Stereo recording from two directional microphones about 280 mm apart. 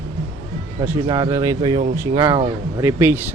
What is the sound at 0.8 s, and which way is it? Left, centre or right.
Speech, centre.